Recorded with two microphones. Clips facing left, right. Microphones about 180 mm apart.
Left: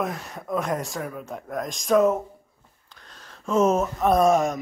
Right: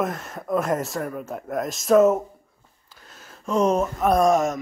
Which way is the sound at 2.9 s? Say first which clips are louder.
Right 1 dB; 5° right (ahead or behind).